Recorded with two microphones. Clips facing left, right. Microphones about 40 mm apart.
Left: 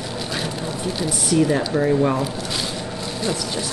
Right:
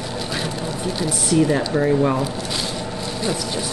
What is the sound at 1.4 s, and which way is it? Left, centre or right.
Speech, centre.